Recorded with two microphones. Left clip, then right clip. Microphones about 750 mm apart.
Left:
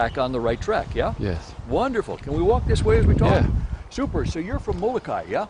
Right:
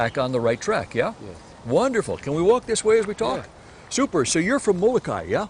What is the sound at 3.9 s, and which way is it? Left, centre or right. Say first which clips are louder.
Speech: right 6 dB; right.